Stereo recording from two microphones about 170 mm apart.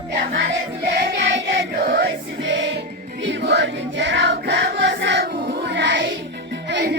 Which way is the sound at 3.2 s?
85° right.